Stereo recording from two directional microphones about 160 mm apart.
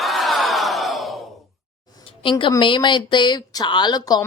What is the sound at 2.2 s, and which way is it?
A woman's voice, 30° left (ahead or behind).